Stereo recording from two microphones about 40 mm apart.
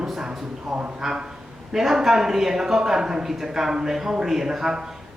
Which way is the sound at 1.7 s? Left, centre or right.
Centre.